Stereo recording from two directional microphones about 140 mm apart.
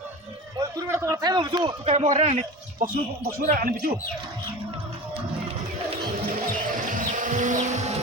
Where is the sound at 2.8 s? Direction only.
75° right (ahead or behind).